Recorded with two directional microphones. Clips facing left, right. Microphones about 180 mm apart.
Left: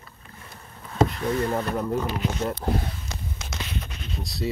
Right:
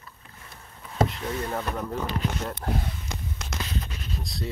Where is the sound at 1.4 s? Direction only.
5° left (ahead or behind).